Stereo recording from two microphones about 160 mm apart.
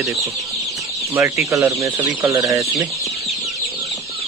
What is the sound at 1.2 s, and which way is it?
Speech, 15° right (ahead or behind).